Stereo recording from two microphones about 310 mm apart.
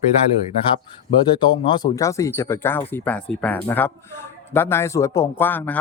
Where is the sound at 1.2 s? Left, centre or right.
Centre.